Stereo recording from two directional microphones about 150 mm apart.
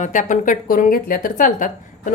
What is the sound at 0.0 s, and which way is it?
A woman's voice, 55° left (ahead or behind).